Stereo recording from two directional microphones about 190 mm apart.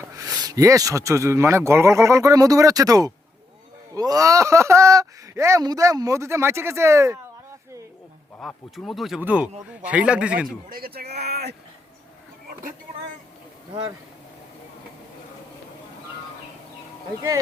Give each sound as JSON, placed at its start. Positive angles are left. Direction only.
{"t": 0.2, "sound": "speech", "side_deg": -20}
{"t": 8.4, "sound": "speech", "side_deg": 5}
{"t": 10.7, "sound": "speech", "side_deg": -50}